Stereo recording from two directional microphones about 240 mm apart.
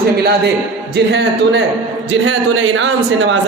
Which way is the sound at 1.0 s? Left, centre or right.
Right.